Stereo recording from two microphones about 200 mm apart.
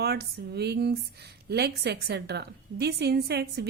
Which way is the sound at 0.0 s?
55° right (ahead or behind).